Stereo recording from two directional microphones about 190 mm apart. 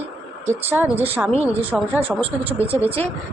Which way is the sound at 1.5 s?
30° right (ahead or behind).